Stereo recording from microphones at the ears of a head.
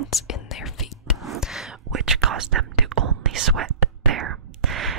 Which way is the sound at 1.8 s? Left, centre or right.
Right.